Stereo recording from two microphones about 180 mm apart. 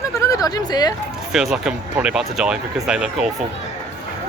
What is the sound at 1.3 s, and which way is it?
Speech, 5° right (ahead or behind).